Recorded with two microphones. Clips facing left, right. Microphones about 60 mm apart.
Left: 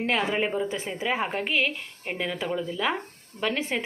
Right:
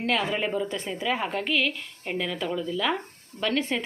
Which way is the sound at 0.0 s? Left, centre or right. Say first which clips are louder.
Left 1 dB; left.